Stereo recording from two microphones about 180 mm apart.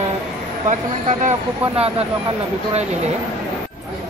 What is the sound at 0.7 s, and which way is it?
Speech, 40° right (ahead or behind).